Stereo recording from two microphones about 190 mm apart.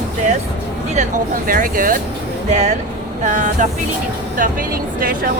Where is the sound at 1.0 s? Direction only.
45° right (ahead or behind).